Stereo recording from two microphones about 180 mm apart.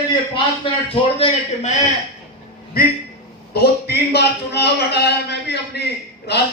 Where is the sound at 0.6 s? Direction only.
30° left (ahead or behind).